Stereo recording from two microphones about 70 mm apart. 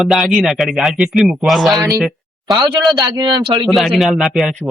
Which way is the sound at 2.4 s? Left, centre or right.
Right.